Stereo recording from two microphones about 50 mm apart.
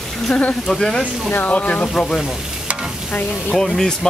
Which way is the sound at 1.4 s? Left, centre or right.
Left.